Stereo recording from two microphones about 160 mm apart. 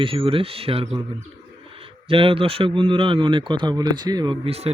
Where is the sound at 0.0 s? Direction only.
35° right (ahead or behind).